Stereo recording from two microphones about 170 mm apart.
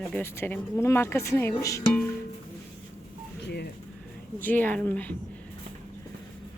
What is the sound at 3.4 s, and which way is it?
Speech, 70° left (ahead or behind).